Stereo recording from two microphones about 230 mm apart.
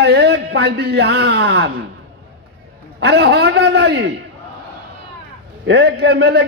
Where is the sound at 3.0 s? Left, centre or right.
Right.